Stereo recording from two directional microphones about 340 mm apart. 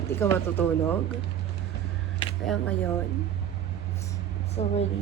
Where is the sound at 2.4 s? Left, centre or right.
Centre.